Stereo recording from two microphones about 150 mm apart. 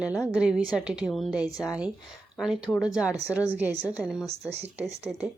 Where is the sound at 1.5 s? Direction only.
25° left (ahead or behind).